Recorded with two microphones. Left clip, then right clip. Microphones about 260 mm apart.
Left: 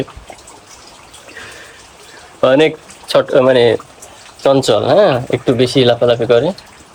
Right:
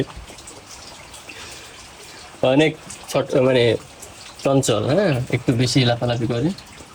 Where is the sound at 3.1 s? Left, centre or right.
Left.